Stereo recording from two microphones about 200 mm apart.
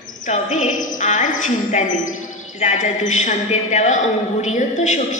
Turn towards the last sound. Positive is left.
turn(degrees=40)  # may be behind; listen again after turning